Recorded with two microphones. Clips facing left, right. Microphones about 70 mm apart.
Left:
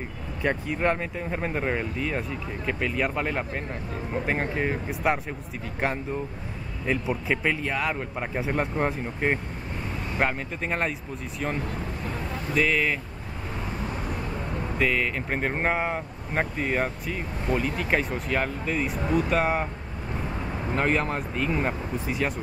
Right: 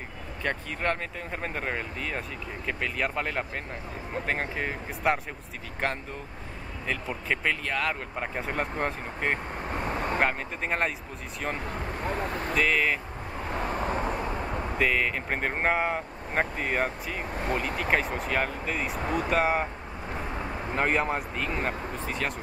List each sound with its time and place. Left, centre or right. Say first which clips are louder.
0.4 s speech: left 5 dB; centre
6.9 s speech: left 4 dB; centre
9.7 s vehicle: right 5 dB; right
10.1 s speech: left 4 dB; centre
12.5 s speech: left 2 dB; centre
13.8 s vehicle: right 4 dB; right
14.8 s speech: left 1 dB; centre
20.7 s speech: left 1 dB; centre